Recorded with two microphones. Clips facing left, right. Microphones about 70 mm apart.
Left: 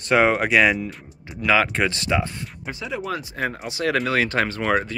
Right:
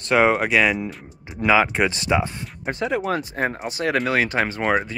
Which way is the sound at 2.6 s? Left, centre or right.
Right.